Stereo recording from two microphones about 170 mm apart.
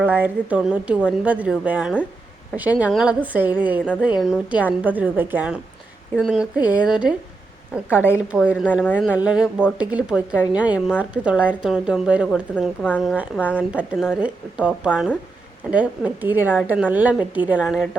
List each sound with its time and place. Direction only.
0.0 s a woman's voice: 10° right (ahead or behind)
8.8 s speech: 10° left (ahead or behind)
9.1 s a woman's voice: 5° right (ahead or behind)
12.8 s speech: 10° left (ahead or behind)
13.1 s a woman's voice: 5° right (ahead or behind)